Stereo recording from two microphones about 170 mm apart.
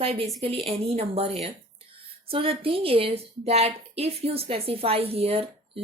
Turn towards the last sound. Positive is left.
turn(degrees=-35)  # may be behind; listen again after turning